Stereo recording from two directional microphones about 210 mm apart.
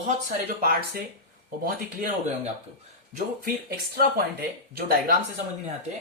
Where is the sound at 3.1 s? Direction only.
45° right (ahead or behind).